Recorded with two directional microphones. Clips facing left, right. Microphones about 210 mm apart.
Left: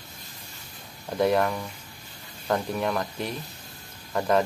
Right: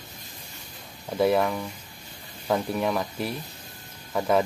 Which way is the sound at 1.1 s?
5° right (ahead or behind).